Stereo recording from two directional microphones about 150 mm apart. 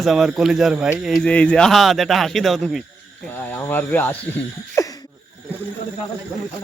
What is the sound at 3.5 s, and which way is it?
Speech, 15° left (ahead or behind).